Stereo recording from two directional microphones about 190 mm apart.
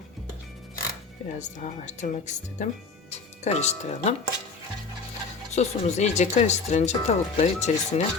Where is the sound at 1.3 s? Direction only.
40° left (ahead or behind).